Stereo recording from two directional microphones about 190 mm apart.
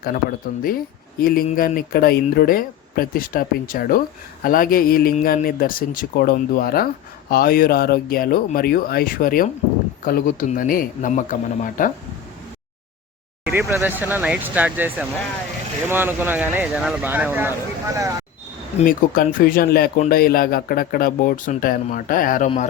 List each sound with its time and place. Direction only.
0.0 s speech: 50° left (ahead or behind)
13.5 s speech: 10° right (ahead or behind)
18.9 s speech: 45° left (ahead or behind)